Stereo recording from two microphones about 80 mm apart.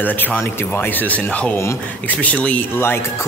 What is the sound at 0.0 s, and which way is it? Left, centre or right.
Speech, left.